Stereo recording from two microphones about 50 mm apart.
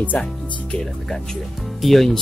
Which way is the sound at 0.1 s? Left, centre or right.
Left.